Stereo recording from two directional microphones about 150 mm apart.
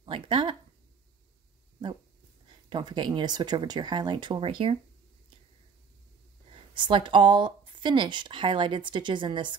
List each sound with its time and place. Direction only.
0.0 s a sound: 35° right (ahead or behind)
2.7 s speech: 30° right (ahead or behind)
6.7 s speech: 30° right (ahead or behind)